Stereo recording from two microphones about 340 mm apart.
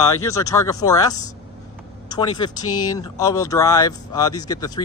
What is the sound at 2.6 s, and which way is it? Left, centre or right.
Speech, left.